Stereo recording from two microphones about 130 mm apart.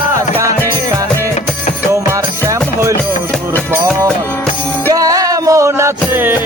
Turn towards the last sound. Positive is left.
turn(degrees=-15)  # may be behind; listen again after turning